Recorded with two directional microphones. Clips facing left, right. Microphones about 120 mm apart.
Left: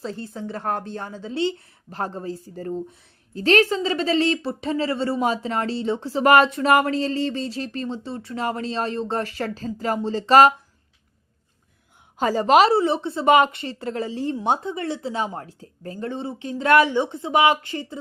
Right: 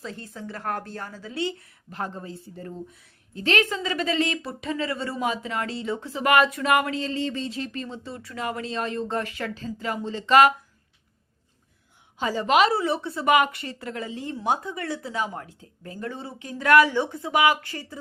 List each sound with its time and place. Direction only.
0.0 s a woman's voice: 30° left (ahead or behind)
12.1 s speech: 45° left (ahead or behind); by 17.9 s 20° left (ahead or behind)